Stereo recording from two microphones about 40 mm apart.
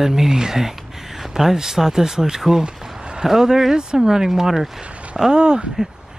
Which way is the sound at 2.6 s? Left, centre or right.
Centre.